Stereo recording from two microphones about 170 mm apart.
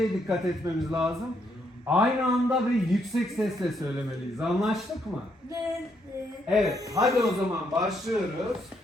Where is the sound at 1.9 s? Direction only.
5° right (ahead or behind).